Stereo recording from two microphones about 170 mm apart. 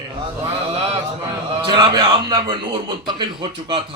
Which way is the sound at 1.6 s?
25° right (ahead or behind).